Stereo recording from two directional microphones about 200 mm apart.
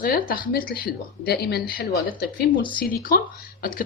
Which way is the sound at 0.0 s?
45° left (ahead or behind).